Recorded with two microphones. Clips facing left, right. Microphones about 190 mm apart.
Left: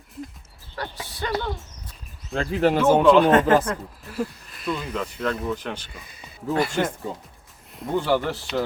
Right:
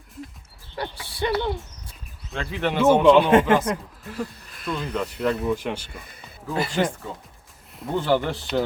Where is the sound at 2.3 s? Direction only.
40° left (ahead or behind).